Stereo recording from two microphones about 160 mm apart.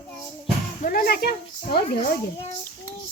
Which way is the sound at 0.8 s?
65° left (ahead or behind).